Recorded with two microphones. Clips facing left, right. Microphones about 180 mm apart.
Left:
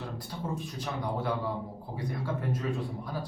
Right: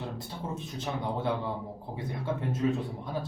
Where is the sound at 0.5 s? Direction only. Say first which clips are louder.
Right 3 dB; 25° right (ahead or behind).